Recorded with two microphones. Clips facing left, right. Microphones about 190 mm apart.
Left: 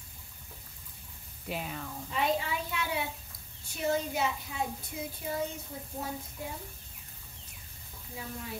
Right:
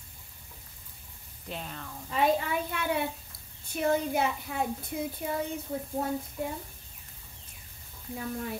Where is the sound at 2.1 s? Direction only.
55° right (ahead or behind).